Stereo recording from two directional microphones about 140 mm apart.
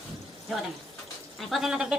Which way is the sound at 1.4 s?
Centre (ahead or behind).